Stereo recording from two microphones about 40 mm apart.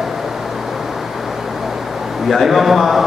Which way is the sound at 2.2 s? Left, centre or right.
Centre.